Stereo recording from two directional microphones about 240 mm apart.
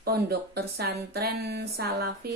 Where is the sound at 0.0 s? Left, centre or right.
Right.